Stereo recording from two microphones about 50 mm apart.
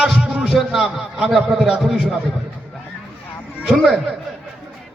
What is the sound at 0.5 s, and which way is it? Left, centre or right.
A man's voice, centre.